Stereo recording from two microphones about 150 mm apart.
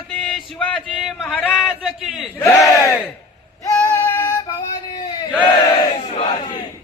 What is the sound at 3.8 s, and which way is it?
Female singing, 15° left (ahead or behind).